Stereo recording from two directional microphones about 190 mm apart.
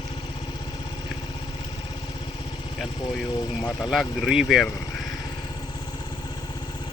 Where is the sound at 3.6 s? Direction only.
20° left (ahead or behind).